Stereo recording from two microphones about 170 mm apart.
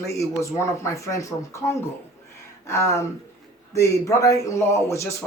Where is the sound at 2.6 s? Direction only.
15° left (ahead or behind).